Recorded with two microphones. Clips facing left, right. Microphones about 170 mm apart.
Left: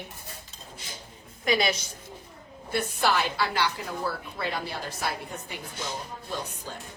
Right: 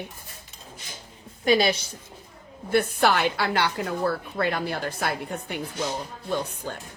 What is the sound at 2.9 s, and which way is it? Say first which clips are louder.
A woman's voice: right 4 dB; 60° right (ahead or behind).